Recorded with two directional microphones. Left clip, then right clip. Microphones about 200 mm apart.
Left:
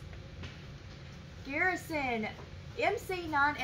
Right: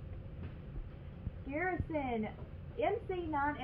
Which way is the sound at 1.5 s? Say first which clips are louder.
Left 5 dB; 10° left (ahead or behind).